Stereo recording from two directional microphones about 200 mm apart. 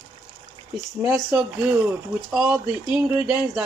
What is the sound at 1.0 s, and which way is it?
Speech, 5° right (ahead or behind).